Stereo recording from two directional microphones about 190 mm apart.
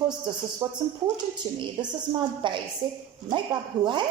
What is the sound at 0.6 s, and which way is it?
A woman's voice, 20° right (ahead or behind).